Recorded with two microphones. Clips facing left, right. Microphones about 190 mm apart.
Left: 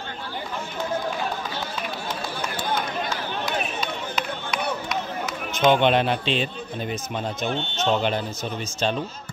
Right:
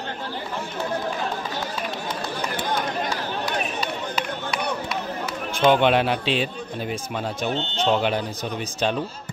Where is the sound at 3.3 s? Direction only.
5° right (ahead or behind).